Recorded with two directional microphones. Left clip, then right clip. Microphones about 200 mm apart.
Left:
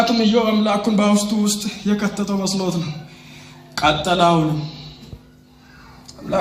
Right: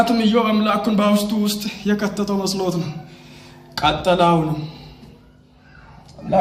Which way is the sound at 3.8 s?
20° left (ahead or behind).